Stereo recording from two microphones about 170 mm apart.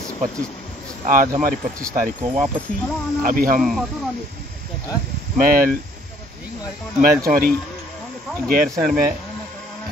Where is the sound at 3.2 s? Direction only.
55° right (ahead or behind).